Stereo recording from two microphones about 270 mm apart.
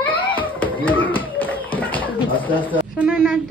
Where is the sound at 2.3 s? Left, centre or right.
Centre.